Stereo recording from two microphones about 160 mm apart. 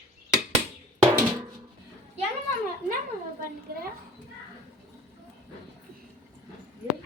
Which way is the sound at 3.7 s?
75° right (ahead or behind).